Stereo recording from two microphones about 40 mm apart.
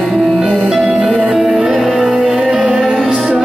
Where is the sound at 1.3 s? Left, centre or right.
Centre.